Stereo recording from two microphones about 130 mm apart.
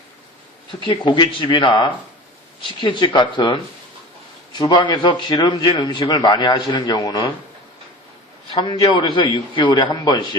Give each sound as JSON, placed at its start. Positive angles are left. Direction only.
{"t": 0.8, "sound": "a man's voice", "side_deg": 35}
{"t": 4.5, "sound": "speech", "side_deg": 25}
{"t": 4.8, "sound": "a man's voice", "side_deg": 35}
{"t": 8.6, "sound": "a man's voice", "side_deg": 40}